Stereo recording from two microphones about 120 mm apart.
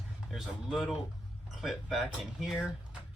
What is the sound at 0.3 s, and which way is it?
Speech, centre (ahead or behind).